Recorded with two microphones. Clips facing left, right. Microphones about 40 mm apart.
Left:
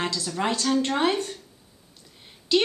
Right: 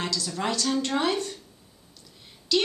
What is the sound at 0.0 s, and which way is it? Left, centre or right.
A woman's voice, left.